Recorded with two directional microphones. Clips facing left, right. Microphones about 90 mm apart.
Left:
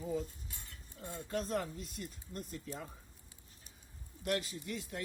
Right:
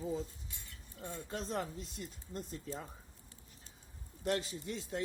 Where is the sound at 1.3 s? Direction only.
25° right (ahead or behind).